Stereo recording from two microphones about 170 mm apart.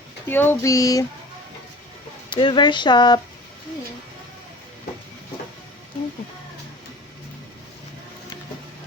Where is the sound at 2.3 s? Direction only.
30° left (ahead or behind).